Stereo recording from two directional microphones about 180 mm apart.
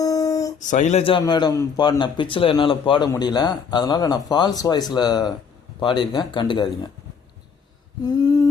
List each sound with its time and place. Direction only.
0.0 s a sound: 20° left (ahead or behind)
0.7 s a man's voice: 40° left (ahead or behind)
1.2 s speech: 20° left (ahead or behind)
8.0 s speech: 20° left (ahead or behind)